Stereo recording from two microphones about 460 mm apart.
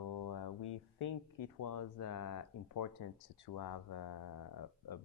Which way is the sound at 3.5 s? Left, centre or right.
Left.